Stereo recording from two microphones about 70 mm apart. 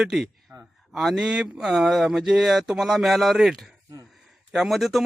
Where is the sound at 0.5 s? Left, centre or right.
Right.